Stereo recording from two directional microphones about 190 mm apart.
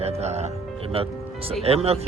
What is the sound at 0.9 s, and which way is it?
Music, 30° right (ahead or behind).